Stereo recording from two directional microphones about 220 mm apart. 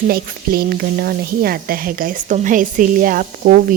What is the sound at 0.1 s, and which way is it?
Speech, 45° right (ahead or behind).